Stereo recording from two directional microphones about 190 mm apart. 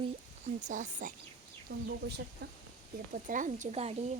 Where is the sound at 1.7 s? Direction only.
60° right (ahead or behind).